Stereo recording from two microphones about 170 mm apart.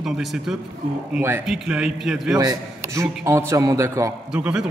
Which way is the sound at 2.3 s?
20° right (ahead or behind).